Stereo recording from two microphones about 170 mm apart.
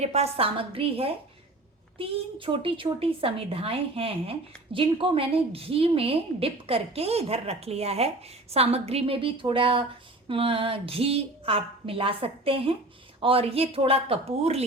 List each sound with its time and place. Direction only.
0.0 s a woman's voice: 40° right (ahead or behind)